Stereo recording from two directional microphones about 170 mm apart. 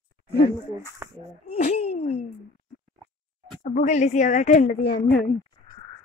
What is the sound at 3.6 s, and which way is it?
Speech, 45° left (ahead or behind).